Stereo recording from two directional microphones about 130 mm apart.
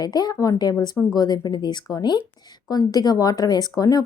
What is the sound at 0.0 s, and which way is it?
Speech, 30° left (ahead or behind).